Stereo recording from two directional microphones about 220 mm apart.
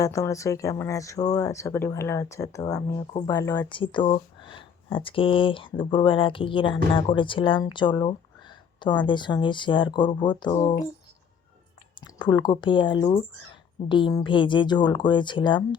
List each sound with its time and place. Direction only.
0.0 s speech: 15° left (ahead or behind)
11.9 s speech: 20° left (ahead or behind)